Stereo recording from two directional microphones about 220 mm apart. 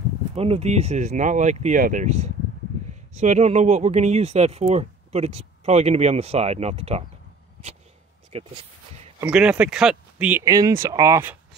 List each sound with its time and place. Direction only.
0.4 s speech: 25° right (ahead or behind)
8.3 s speech: 30° right (ahead or behind)
9.2 s speech: 5° right (ahead or behind)